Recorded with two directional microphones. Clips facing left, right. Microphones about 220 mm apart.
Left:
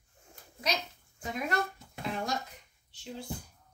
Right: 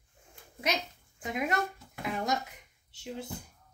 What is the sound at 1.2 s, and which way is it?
Speech, 20° right (ahead or behind).